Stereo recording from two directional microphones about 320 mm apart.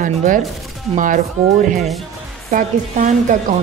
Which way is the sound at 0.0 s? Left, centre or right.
Right.